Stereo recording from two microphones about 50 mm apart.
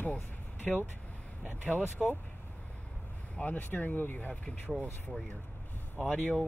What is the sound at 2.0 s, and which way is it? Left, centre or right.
Speech, centre.